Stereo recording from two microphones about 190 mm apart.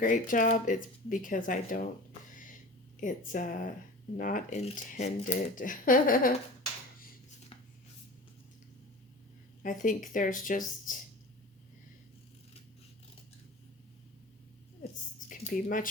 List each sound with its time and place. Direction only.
0.0 s speech: 45° left (ahead or behind)
2.3 s a sound: 45° left (ahead or behind)
3.0 s speech: 45° left (ahead or behind)
9.6 s speech: 45° left (ahead or behind)
15.3 s speech: 45° left (ahead or behind)